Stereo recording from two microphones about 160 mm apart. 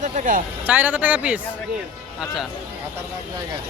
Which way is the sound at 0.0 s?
55° right (ahead or behind).